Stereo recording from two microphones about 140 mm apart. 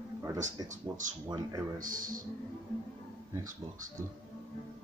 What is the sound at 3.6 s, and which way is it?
Speech, 30° right (ahead or behind).